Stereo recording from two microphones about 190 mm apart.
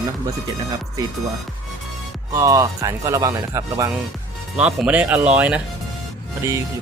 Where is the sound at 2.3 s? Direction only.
15° right (ahead or behind).